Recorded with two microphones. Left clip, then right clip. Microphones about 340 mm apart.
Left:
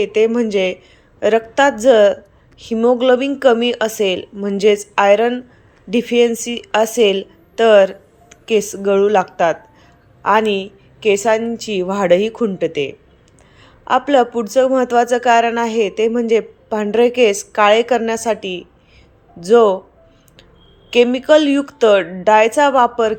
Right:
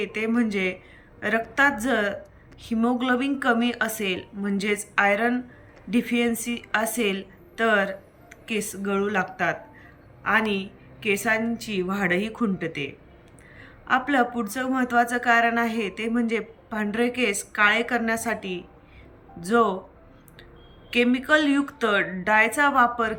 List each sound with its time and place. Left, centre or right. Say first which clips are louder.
0.0 s speech: left 12 dB; centre
20.9 s speech: left 10 dB; centre